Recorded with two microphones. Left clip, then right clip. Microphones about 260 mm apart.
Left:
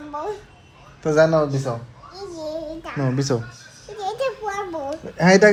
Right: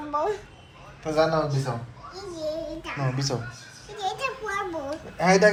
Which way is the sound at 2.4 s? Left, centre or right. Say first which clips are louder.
Left 1 dB; left.